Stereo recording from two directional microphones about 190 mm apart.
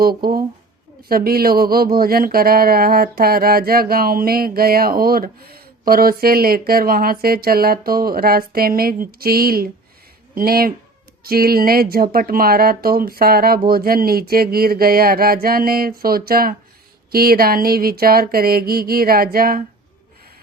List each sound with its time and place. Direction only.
0.0 s speech: 50° right (ahead or behind)